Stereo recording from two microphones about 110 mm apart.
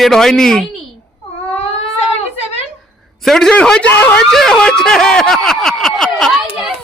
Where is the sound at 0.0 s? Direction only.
5° left (ahead or behind).